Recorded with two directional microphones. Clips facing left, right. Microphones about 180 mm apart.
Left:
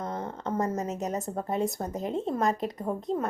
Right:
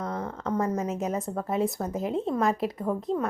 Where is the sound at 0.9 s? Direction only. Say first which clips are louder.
Right 2 dB; centre (ahead or behind).